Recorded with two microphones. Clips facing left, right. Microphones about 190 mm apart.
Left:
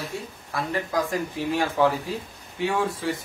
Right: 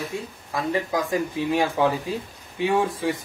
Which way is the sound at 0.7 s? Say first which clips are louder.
Right 2 dB; 15° right (ahead or behind).